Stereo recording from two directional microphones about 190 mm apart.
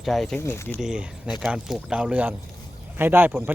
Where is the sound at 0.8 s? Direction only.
5° right (ahead or behind).